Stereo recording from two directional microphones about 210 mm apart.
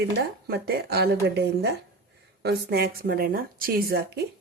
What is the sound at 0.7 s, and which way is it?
A woman's voice, 50° right (ahead or behind).